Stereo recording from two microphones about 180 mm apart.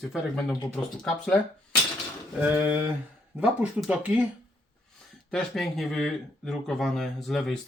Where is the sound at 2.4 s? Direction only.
10° right (ahead or behind).